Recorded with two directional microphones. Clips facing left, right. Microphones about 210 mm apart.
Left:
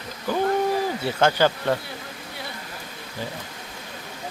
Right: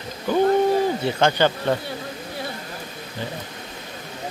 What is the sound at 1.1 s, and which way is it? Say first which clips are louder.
Speech: right 1 dB; 5° left (ahead or behind).